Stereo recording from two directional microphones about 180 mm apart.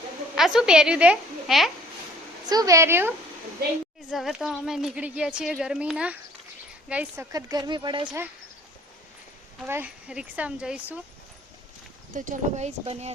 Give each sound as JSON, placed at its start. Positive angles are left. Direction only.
{"t": 0.3, "sound": "speech", "side_deg": -5}
{"t": 2.5, "sound": "speech", "side_deg": -20}
{"t": 4.1, "sound": "speech", "side_deg": 0}
{"t": 7.3, "sound": "speech", "side_deg": -20}
{"t": 9.6, "sound": "speech", "side_deg": -10}
{"t": 12.1, "sound": "speech", "side_deg": -40}